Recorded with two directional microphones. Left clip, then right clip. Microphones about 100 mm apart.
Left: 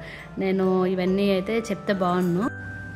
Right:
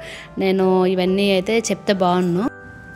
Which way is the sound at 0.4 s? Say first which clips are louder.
Right 6 dB; 35° right (ahead or behind).